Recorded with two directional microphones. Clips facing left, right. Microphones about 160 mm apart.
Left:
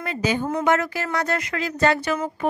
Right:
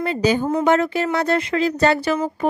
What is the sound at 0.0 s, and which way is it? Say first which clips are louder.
Speech: right 5 dB; 35° right (ahead or behind).